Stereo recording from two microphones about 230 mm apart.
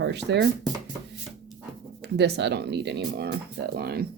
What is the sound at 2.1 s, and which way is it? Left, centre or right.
Speech, right.